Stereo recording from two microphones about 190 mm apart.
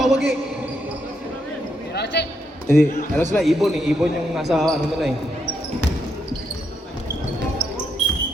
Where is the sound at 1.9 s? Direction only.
60° left (ahead or behind).